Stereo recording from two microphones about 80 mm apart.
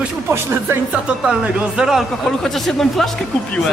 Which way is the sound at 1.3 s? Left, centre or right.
Centre.